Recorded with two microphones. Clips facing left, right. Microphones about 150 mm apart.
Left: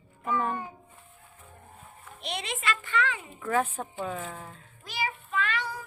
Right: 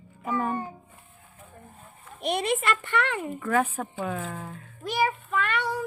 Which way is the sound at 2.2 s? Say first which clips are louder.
Right 8 dB; 50° right (ahead or behind).